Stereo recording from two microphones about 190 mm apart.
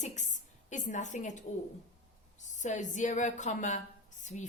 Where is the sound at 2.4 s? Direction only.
40° left (ahead or behind).